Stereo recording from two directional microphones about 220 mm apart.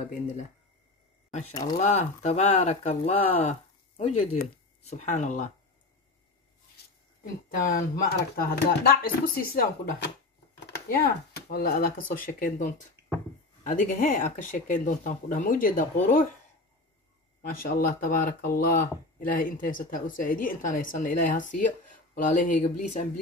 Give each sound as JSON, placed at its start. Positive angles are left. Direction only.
{"t": 1.5, "sound": "speech", "side_deg": 15}
{"t": 1.8, "sound": "speech", "side_deg": 30}
{"t": 7.4, "sound": "speech", "side_deg": 40}
{"t": 10.6, "sound": "a sound", "side_deg": 45}
{"t": 11.5, "sound": "speech", "side_deg": 40}
{"t": 17.4, "sound": "speech", "side_deg": 40}